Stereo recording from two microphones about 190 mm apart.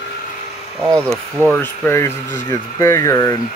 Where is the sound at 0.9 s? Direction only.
15° right (ahead or behind).